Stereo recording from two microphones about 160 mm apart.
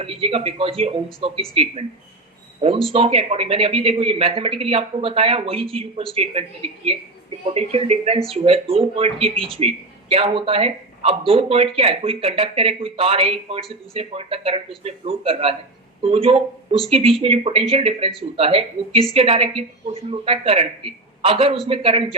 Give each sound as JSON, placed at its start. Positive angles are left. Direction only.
{"t": 0.0, "sound": "speech", "side_deg": -35}
{"t": 2.6, "sound": "speech", "side_deg": -35}
{"t": 9.3, "sound": "speech", "side_deg": 0}
{"t": 9.6, "sound": "speech", "side_deg": -40}